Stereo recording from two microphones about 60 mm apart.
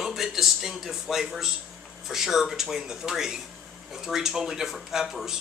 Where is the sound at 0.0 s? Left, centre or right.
Centre.